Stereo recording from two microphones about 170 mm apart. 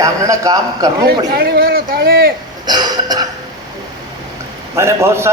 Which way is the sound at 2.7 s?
25° right (ahead or behind).